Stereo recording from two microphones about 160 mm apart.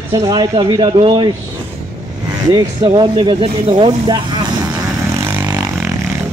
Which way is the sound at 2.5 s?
30° right (ahead or behind).